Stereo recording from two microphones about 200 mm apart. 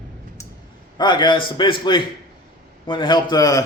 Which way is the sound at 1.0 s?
20° left (ahead or behind).